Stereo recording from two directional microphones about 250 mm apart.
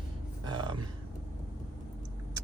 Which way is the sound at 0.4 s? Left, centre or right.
Centre.